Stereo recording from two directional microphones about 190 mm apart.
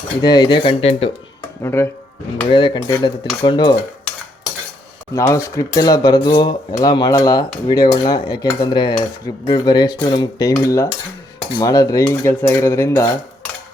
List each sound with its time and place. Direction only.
0.2 s speech: 20° left (ahead or behind)
1.6 s cutlery: 15° left (ahead or behind)
2.5 s speech: 25° left (ahead or behind)
5.1 s speech: 15° left (ahead or behind)
10.5 s cutlery: 15° left (ahead or behind)